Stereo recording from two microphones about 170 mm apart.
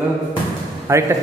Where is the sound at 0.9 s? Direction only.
15° right (ahead or behind).